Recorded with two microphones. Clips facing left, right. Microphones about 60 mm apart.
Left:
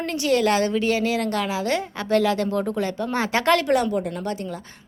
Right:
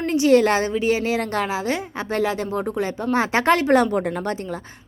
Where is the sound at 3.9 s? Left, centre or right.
Right.